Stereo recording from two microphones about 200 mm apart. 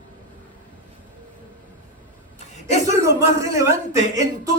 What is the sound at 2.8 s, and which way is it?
Speech, 15° right (ahead or behind).